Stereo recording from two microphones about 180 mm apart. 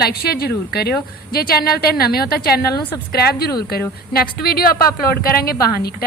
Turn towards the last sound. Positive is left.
turn(degrees=60)  # may be behind; listen again after turning